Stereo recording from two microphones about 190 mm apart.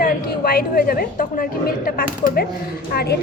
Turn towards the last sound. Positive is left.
turn(degrees=55)  # may be behind; listen again after turning